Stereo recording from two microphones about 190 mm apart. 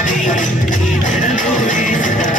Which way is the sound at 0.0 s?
40° left (ahead or behind).